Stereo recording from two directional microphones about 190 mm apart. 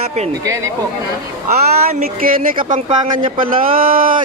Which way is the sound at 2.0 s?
50° right (ahead or behind).